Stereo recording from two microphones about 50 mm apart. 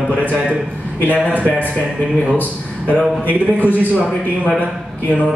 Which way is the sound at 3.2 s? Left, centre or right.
Left.